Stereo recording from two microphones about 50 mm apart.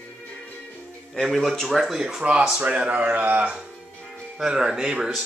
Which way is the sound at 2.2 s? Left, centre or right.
Right.